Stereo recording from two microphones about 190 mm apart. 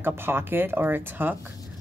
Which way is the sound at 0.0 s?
10° right (ahead or behind).